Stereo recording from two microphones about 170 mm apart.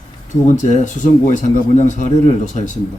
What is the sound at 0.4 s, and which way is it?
Speech, 45° left (ahead or behind).